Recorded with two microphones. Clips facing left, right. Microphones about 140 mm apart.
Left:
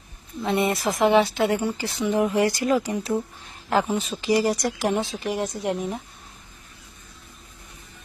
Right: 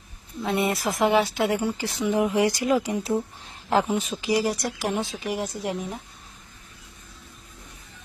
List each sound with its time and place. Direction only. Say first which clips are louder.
0.4 s speech: left 2 dB; 5° right (ahead or behind)
3.4 s a sound: even; 25° right (ahead or behind)
4.1 s speech: left 5 dB; 5° right (ahead or behind)